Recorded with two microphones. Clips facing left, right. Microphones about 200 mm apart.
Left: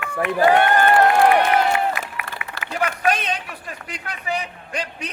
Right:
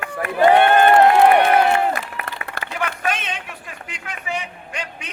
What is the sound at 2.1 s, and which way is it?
Applause, 40° right (ahead or behind).